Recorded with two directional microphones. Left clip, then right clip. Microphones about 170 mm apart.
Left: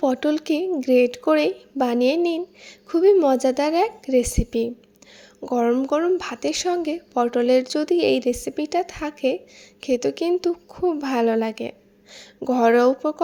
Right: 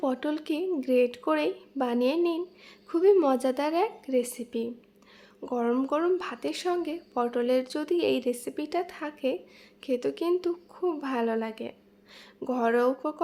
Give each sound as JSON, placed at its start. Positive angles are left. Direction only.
{"t": 0.0, "sound": "speech", "side_deg": 30}